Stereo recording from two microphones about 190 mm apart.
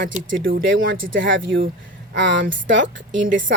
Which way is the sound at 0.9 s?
90° right.